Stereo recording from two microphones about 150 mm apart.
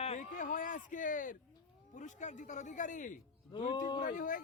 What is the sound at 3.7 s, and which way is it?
Speech, 30° left (ahead or behind).